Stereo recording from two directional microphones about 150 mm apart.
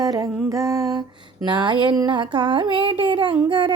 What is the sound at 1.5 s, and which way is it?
Humming, 30° right (ahead or behind).